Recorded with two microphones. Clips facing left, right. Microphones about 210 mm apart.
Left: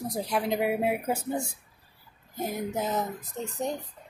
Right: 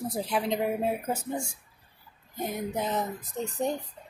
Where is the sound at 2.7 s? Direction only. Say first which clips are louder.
Even; centre (ahead or behind).